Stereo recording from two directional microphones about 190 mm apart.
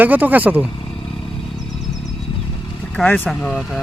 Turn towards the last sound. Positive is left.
turn(degrees=5)  # may be behind; listen again after turning